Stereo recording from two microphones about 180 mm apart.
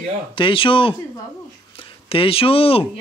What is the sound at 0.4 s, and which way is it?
Speech, 30° left (ahead or behind).